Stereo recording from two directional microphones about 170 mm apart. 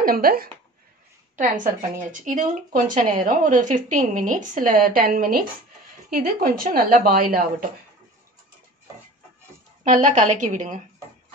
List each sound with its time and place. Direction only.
0.0 s a woman's voice: 60° right (ahead or behind)
9.8 s speech: 50° right (ahead or behind)